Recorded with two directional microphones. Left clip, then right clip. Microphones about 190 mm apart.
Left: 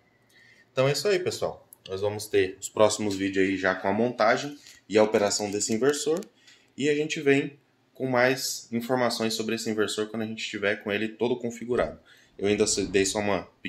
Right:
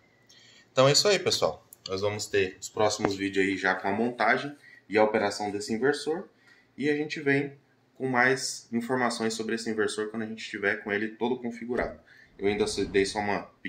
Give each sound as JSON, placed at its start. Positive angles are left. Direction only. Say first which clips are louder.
{"t": 0.7, "sound": "speech", "louder": "right 2 dB", "side_deg": 20}
{"t": 2.3, "sound": "speech", "louder": "left 3 dB", "side_deg": 35}
{"t": 2.7, "sound": "speech", "louder": "left 4 dB", "side_deg": 55}
{"t": 8.0, "sound": "speech", "louder": "left 1 dB", "side_deg": 55}